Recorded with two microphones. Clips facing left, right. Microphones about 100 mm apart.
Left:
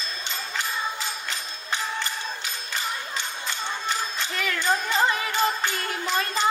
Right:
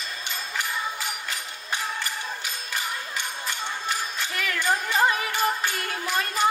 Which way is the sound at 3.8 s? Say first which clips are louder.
Left 1 dB; 25° left (ahead or behind).